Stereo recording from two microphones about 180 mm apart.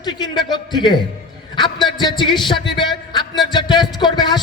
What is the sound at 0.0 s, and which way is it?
A man's voice, 25° left (ahead or behind).